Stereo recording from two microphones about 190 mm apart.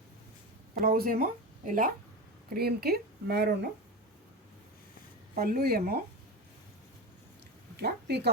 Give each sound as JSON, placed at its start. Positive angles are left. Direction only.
{"t": 0.7, "sound": "speech", "side_deg": -50}
{"t": 5.3, "sound": "speech", "side_deg": -50}
{"t": 7.8, "sound": "speech", "side_deg": -55}